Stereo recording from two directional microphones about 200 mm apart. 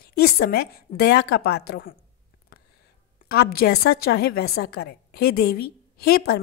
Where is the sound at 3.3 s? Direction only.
50° left (ahead or behind).